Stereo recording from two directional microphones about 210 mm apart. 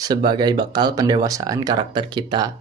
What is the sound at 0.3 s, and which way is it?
Speech, 20° right (ahead or behind).